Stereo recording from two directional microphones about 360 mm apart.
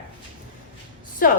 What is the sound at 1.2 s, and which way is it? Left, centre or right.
Speech, left.